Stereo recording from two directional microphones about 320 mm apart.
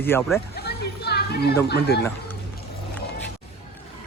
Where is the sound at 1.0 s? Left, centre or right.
Left.